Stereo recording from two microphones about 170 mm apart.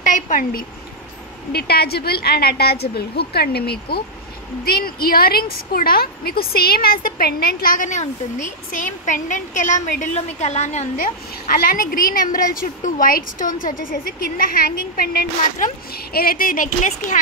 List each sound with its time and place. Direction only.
0.0 s speech: 50° left (ahead or behind)
1.5 s a woman's voice: 70° left (ahead or behind); by 10.9 s 40° left (ahead or behind)
11.5 s a woman's voice: 60° left (ahead or behind)